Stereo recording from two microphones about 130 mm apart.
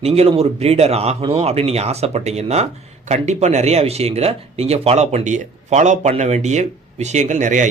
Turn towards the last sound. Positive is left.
turn(degrees=-70)  # may be behind; listen again after turning